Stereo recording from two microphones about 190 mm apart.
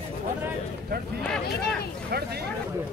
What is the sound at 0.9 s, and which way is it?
Speech, 55° right (ahead or behind).